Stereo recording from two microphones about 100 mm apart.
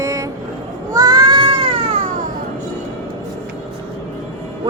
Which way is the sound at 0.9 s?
40° right (ahead or behind).